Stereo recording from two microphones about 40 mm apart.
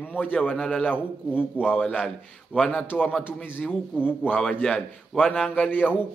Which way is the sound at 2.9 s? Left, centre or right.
Left.